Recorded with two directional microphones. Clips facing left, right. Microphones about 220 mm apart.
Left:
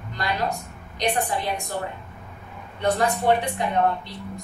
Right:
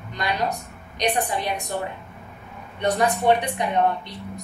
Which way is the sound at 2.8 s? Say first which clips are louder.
Right 1 dB; 20° right (ahead or behind).